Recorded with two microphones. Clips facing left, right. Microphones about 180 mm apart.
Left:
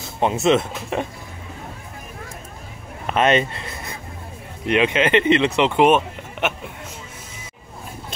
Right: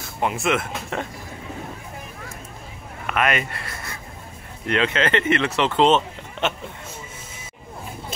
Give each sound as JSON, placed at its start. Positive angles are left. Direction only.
{"t": 0.0, "sound": "speech", "side_deg": 25}
{"t": 3.1, "sound": "speech", "side_deg": 30}